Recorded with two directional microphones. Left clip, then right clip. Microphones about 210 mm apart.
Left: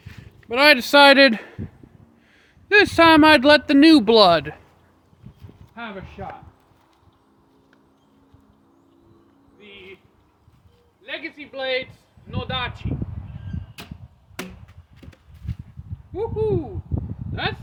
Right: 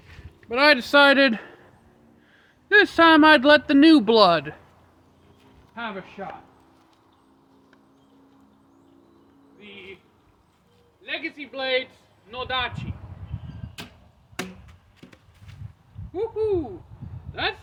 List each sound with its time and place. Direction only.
0.1 s speech: 40° left (ahead or behind)
2.6 s speech: 35° left (ahead or behind)
5.7 s speech: 10° left (ahead or behind)
9.6 s a sound: 5° left (ahead or behind)
11.0 s speech: centre (ahead or behind)
15.0 s walk: 15° left (ahead or behind)
15.5 s a sound: 5° left (ahead or behind)
16.1 s speech: centre (ahead or behind)